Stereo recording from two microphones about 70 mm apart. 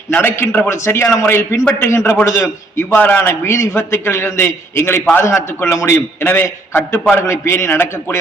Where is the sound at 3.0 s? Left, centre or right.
Left.